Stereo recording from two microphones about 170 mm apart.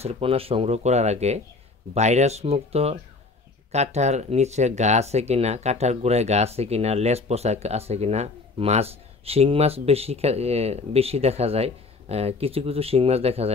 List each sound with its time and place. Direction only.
0.0 s speech: 35° right (ahead or behind)